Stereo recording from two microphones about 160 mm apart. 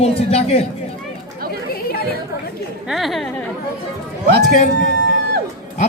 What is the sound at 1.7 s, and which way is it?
Chatter, 70° left (ahead or behind).